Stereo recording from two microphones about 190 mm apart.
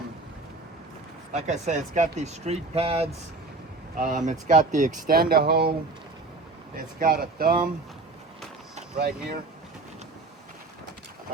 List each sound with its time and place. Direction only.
1.3 s speech: 35° right (ahead or behind); by 5.7 s 55° right (ahead or behind)
6.7 s speech: 50° right (ahead or behind)
9.0 s speech: 55° right (ahead or behind)